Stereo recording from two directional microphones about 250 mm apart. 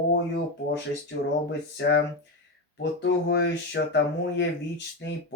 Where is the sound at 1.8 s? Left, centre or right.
Left.